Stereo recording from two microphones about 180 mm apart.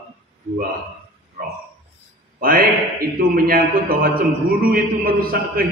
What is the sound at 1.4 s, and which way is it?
A man's voice, 55° right (ahead or behind).